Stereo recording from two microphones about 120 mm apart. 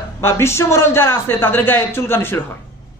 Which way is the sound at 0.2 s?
20° left (ahead or behind).